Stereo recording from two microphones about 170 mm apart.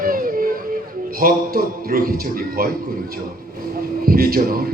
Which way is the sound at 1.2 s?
60° right (ahead or behind).